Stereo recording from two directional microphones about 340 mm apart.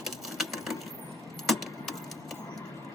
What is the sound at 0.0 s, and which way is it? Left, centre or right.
Sewing machine, centre.